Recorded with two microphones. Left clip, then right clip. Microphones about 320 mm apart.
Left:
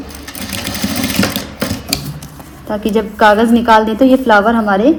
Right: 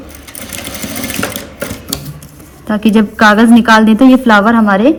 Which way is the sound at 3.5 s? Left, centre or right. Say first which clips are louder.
Right 2 dB; right.